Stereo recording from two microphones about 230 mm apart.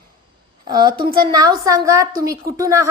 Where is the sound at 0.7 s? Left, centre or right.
Centre.